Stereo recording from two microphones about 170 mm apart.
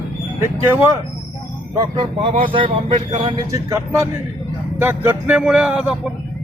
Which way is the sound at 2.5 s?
30° right (ahead or behind).